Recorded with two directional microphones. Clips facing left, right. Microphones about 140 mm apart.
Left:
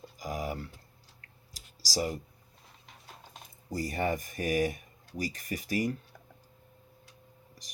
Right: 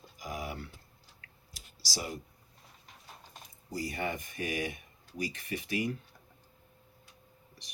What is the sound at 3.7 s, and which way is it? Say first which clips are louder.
Speech: left 4 dB; 45° left (ahead or behind).